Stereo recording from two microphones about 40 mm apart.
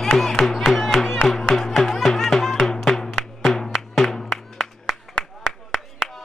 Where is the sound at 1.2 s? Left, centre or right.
Centre.